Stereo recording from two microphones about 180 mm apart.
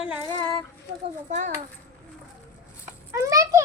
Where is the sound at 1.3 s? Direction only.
40° right (ahead or behind).